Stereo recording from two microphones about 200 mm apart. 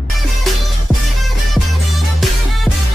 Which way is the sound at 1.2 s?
Centre (ahead or behind).